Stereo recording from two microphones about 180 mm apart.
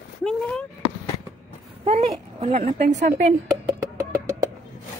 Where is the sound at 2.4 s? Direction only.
35° right (ahead or behind).